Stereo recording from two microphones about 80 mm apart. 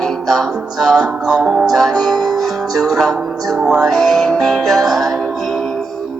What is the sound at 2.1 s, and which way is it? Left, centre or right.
Music, right.